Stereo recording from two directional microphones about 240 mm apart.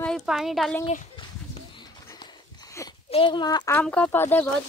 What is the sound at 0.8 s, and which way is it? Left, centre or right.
Horse, left.